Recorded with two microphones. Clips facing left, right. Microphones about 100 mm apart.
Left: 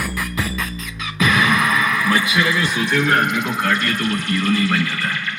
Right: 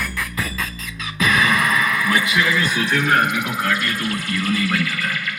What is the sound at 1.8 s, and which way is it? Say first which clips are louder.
Music: left 1 dB; 20° left (ahead or behind).